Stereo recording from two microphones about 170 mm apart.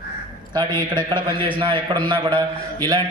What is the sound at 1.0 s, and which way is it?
A man's voice, 25° right (ahead or behind).